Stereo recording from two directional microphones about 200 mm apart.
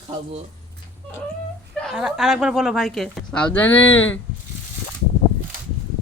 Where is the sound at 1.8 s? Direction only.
Centre (ahead or behind).